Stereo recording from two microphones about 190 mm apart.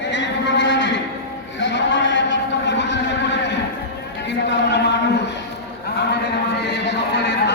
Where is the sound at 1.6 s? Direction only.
70° left (ahead or behind).